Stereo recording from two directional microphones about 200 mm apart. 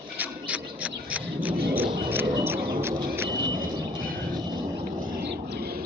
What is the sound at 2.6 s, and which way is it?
Horse, 50° right (ahead or behind).